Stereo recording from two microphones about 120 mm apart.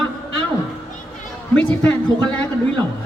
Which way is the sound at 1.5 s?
10° left (ahead or behind).